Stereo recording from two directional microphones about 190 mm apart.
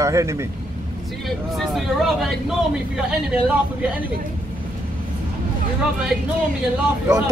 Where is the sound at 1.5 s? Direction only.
Centre (ahead or behind).